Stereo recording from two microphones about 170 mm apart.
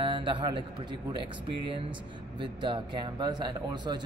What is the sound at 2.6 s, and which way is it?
Speech, 30° right (ahead or behind).